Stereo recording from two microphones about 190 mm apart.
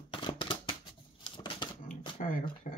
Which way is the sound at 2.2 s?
45° left (ahead or behind).